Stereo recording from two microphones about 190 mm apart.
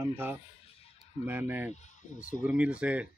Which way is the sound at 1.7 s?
40° left (ahead or behind).